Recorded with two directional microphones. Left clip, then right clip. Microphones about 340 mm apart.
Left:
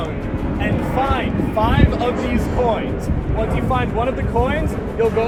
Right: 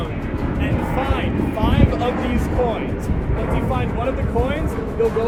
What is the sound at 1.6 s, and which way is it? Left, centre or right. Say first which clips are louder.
Speech: left 4 dB; left.